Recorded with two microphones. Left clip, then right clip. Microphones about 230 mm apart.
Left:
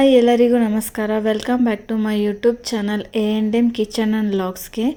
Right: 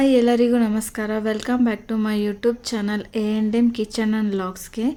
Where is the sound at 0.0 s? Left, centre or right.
Centre.